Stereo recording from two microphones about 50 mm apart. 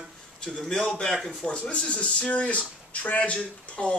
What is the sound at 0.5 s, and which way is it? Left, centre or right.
Speech, centre.